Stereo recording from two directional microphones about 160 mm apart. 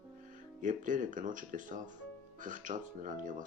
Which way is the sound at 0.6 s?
55° right (ahead or behind).